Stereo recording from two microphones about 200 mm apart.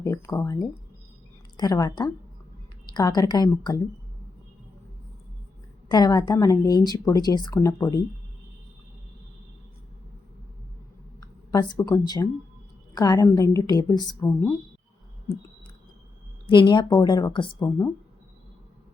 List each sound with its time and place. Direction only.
0.0 s speech: 15° left (ahead or behind)
5.9 s speech: 20° left (ahead or behind)
11.2 s a woman's voice: 20° left (ahead or behind)
16.5 s speech: 25° left (ahead or behind)